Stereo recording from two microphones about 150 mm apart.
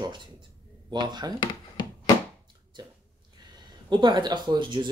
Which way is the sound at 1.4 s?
30° left (ahead or behind).